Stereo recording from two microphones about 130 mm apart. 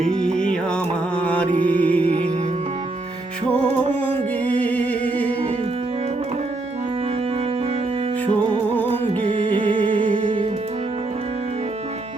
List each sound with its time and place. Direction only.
0.0 s music: 5° left (ahead or behind)
4.4 s a sound: 10° left (ahead or behind)
8.9 s music: 45° right (ahead or behind)